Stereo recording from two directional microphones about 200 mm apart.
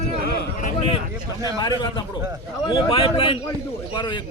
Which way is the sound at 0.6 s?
30° left (ahead or behind).